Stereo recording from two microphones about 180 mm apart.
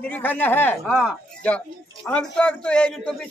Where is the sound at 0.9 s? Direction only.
5° right (ahead or behind).